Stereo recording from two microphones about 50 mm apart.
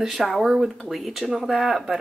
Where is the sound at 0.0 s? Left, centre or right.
Centre.